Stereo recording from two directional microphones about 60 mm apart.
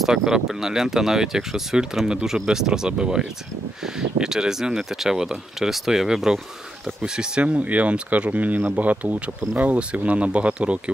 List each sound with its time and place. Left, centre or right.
0.0 s speech: centre